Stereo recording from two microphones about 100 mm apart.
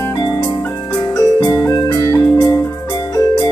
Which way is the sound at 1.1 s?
40° left (ahead or behind).